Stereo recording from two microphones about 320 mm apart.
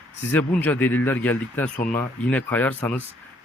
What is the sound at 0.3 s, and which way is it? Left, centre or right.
Speech, centre.